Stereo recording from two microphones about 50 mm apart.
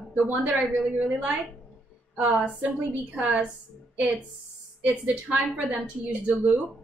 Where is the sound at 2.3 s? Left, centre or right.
Right.